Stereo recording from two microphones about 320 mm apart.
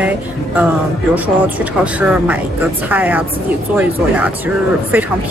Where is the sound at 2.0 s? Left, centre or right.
Centre.